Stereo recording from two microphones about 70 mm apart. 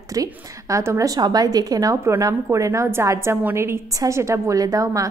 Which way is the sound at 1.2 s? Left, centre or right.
Right.